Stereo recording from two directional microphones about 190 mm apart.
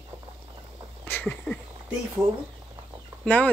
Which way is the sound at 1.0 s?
10° left (ahead or behind).